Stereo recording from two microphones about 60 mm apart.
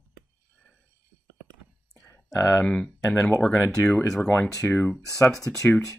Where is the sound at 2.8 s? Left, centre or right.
Centre.